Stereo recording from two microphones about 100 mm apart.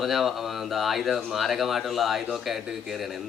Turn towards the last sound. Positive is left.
turn(degrees=0)  # may be behind; listen again after turning